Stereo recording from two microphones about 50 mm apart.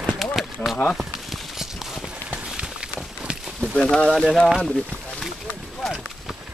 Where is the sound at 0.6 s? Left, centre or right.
Left.